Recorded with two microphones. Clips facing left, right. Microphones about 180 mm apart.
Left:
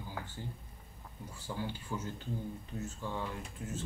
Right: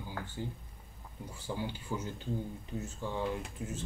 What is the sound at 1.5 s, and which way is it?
Speech, 20° right (ahead or behind).